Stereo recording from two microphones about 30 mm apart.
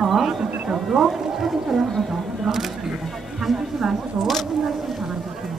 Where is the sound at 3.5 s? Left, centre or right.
Centre.